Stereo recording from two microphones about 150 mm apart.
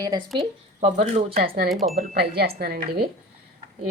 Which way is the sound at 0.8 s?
50° right (ahead or behind).